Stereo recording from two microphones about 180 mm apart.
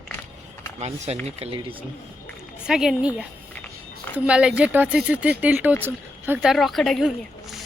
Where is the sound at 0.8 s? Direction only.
35° right (ahead or behind).